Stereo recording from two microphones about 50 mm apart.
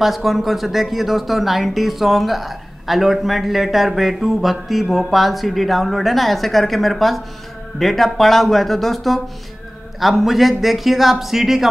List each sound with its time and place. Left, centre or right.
0.0 s speech: centre